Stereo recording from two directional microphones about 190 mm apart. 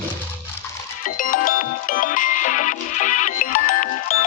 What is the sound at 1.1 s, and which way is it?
Music, 45° left (ahead or behind).